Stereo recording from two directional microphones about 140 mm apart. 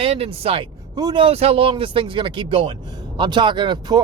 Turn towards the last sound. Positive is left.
turn(degrees=-30)  # may be behind; listen again after turning